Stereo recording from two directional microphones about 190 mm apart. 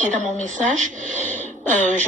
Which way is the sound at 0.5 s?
40° right (ahead or behind).